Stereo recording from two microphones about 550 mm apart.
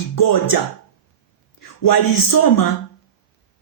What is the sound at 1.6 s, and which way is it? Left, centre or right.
Speech, left.